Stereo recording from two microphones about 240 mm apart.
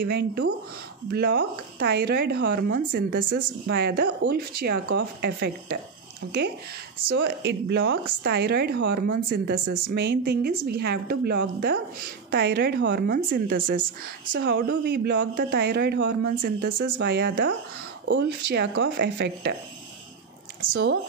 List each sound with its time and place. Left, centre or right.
0.0 s a man's voice: right
14.7 s a man's voice: right